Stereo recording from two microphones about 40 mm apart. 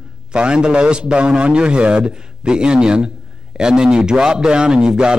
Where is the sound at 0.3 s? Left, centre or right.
Right.